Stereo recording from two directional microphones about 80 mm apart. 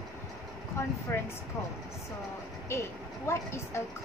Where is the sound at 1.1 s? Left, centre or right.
Left.